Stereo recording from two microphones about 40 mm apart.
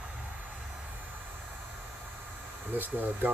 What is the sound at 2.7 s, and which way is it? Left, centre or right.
Speech, right.